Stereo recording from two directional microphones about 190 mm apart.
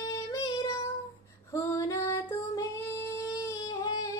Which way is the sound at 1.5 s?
15° left (ahead or behind).